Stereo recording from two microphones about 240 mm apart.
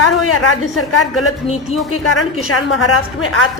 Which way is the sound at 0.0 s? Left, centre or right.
Left.